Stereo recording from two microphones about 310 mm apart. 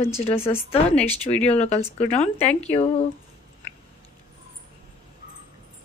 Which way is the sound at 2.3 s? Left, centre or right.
Centre.